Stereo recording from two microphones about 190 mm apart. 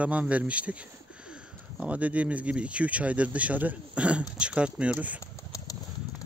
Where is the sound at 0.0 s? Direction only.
5° right (ahead or behind).